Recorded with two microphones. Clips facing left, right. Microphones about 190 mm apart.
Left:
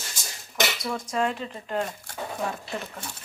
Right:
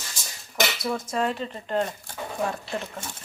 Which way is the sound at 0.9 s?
5° right (ahead or behind).